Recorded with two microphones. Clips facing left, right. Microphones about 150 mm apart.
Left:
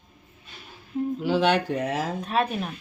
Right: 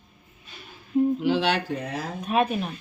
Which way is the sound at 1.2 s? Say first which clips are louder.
Left 1 dB; 40° left (ahead or behind).